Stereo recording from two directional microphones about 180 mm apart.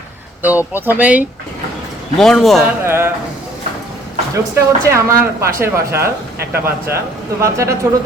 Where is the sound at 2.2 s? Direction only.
Centre (ahead or behind).